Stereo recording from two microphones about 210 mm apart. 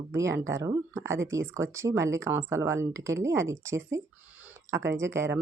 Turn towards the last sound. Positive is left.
turn(degrees=-15)  # may be behind; listen again after turning